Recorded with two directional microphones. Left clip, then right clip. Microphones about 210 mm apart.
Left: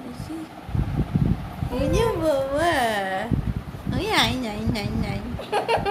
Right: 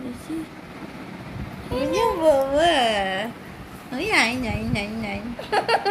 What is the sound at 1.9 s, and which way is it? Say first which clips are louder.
A woman's voice: right 4 dB; 5° right (ahead or behind).